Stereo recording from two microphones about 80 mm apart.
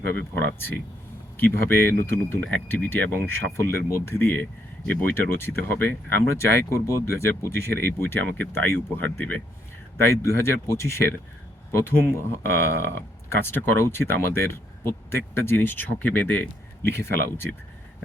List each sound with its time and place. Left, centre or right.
0.2 s speech: left
2.4 s speech: centre
6.7 s speech: left; by 9.4 s centre
10.1 s speech: left
16.9 s speech: left